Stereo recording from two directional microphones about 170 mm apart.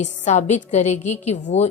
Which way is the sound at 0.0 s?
45° left (ahead or behind).